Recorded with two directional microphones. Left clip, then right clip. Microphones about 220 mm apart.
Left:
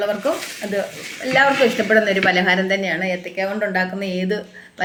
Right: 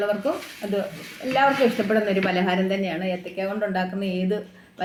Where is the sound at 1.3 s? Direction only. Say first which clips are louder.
Left 4 dB; 25° left (ahead or behind).